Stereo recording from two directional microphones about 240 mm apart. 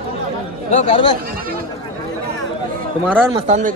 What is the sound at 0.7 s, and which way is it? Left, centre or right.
Speech, left.